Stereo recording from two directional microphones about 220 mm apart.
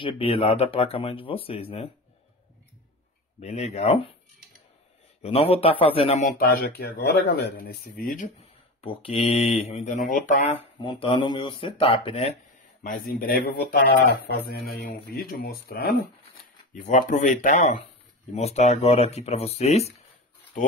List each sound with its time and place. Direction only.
0.0 s speech: 25° left (ahead or behind)
3.3 s speech: 30° left (ahead or behind)
5.2 s speech: 25° left (ahead or behind)
6.8 s speech: 45° left (ahead or behind); by 12.3 s 25° left (ahead or behind)
12.8 s speech: 40° left (ahead or behind)